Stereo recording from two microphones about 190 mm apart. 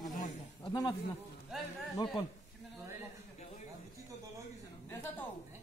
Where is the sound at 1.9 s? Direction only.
20° left (ahead or behind).